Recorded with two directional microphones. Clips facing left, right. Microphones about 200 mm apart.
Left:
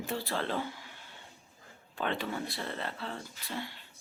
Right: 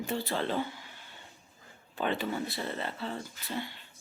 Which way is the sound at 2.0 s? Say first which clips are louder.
Right 2 dB; 5° right (ahead or behind).